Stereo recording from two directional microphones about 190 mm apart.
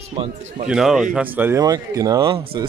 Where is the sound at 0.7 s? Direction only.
Centre (ahead or behind).